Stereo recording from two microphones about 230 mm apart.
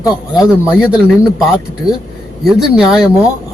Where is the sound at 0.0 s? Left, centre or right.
Centre.